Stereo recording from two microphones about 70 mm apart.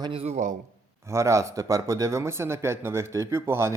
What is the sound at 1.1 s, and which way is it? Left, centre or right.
Speech, right.